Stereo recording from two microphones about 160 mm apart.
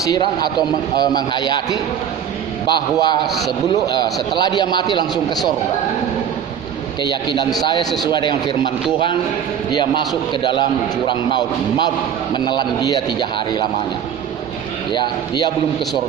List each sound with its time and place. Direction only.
0.0 s a man's voice: 25° left (ahead or behind)
3.3 s a man's voice: centre (ahead or behind)
3.8 s a man's voice: 25° left (ahead or behind)
7.0 s a man's voice: 30° left (ahead or behind)
12.4 s a man's voice: 25° left (ahead or behind)
14.9 s a man's voice: 30° left (ahead or behind)